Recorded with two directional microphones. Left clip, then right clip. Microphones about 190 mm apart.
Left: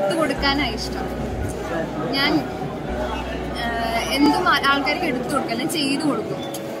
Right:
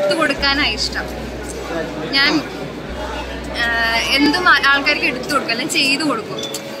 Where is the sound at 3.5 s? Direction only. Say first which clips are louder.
Right 7 dB; 15° left (ahead or behind).